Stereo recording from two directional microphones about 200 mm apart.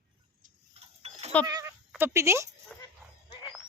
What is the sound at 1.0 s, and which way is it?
Goat, 30° right (ahead or behind).